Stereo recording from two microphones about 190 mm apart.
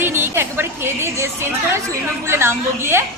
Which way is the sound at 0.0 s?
10° right (ahead or behind).